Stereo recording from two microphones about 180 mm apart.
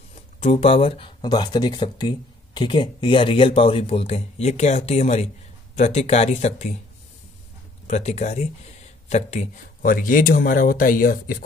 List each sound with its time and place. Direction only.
0.4 s speech: 35° left (ahead or behind)
7.8 s speech: 40° left (ahead or behind)